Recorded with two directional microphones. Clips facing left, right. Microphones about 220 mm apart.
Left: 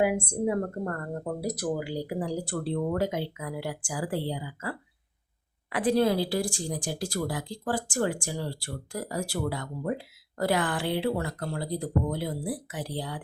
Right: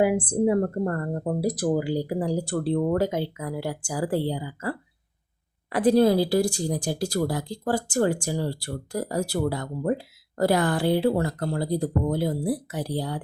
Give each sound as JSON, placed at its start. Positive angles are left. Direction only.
{"t": 0.0, "sound": "speech", "side_deg": -30}
{"t": 5.7, "sound": "speech", "side_deg": -40}